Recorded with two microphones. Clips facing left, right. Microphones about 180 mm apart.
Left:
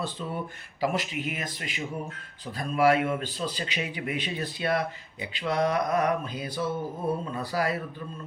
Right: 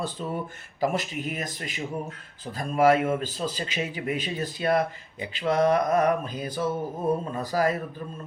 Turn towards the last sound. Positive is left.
turn(degrees=-40)  # may be behind; listen again after turning